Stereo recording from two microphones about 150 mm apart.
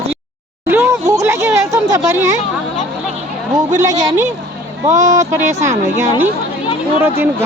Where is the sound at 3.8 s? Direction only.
25° right (ahead or behind).